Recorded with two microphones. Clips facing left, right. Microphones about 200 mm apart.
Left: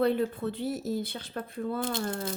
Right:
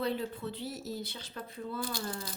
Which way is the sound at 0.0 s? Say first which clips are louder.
Left 8 dB; 55° left (ahead or behind).